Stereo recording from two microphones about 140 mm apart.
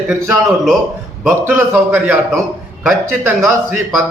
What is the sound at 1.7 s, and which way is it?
Speech, 5° right (ahead or behind).